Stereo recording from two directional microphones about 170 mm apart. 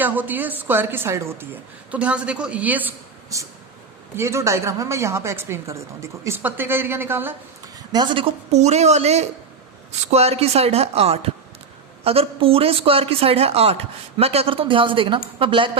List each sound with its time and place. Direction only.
0.0 s a woman's voice: 10° right (ahead or behind)
7.9 s speech: 30° right (ahead or behind)